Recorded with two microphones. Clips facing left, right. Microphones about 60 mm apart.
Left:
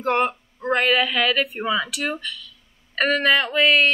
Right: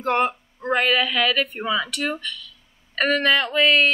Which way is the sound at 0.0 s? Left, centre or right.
Centre.